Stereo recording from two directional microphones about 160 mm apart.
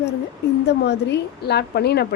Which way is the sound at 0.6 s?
90° left.